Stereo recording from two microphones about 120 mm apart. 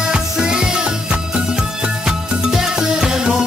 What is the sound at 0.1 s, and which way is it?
Music, 5° right (ahead or behind).